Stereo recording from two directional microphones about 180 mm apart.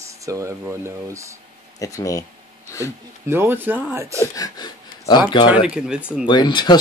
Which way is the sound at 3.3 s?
10° right (ahead or behind).